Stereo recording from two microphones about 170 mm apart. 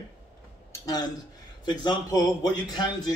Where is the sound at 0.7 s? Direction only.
20° left (ahead or behind).